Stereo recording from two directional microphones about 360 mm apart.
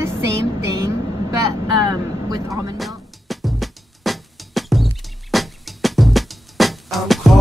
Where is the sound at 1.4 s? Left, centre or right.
Centre.